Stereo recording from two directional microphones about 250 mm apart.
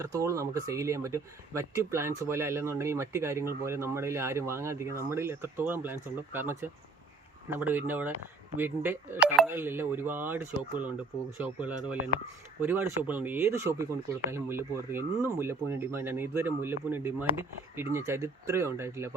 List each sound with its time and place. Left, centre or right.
0.0 s speech: centre